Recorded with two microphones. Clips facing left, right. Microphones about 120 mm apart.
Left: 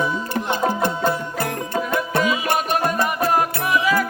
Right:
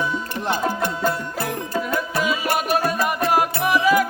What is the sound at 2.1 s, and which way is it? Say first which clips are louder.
Music: left 2 dB; 20° left (ahead or behind).